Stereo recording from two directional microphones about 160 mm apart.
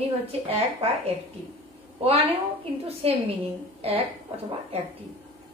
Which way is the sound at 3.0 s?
35° right (ahead or behind).